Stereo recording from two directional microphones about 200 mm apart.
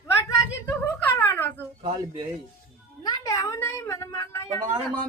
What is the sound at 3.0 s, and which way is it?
Speech, 20° left (ahead or behind).